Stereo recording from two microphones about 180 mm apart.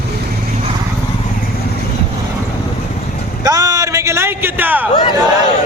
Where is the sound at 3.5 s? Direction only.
20° right (ahead or behind).